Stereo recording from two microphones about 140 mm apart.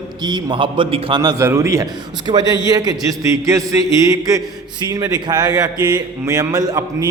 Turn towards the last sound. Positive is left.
turn(degrees=-25)  # may be behind; listen again after turning